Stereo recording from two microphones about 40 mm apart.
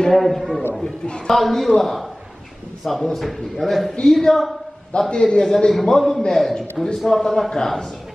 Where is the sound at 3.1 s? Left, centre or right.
Centre.